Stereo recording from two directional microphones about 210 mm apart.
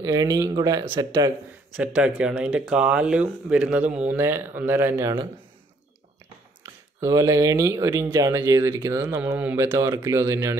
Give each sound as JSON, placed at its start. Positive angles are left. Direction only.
{"t": 0.0, "sound": "speech", "side_deg": -20}
{"t": 2.0, "sound": "speech", "side_deg": -5}
{"t": 6.6, "sound": "speech", "side_deg": -15}